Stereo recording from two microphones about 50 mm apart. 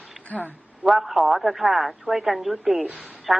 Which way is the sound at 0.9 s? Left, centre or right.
Centre.